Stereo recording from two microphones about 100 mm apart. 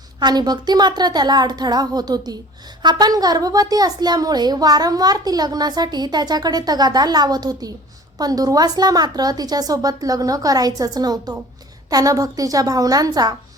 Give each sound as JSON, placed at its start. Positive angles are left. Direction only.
{"t": 0.2, "sound": "a child's voice", "side_deg": -45}